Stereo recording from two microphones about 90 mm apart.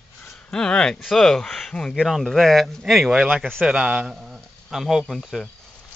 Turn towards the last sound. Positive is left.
turn(degrees=0)  # may be behind; listen again after turning